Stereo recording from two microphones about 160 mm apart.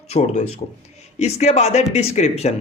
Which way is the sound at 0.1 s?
45° left (ahead or behind).